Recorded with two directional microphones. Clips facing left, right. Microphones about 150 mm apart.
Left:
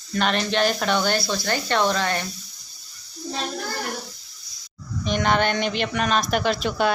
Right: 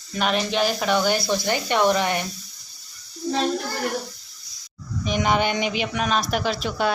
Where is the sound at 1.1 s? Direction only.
15° right (ahead or behind).